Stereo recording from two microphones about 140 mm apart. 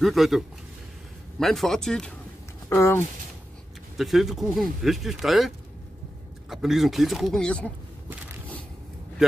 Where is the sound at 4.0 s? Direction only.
Centre (ahead or behind).